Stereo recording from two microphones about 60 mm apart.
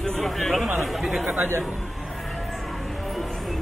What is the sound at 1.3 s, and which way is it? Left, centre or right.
Speech, right.